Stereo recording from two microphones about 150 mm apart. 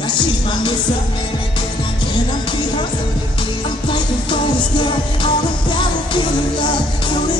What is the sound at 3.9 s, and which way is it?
Music, 30° left (ahead or behind).